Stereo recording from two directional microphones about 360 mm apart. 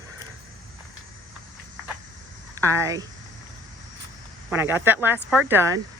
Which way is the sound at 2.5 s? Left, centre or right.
Centre.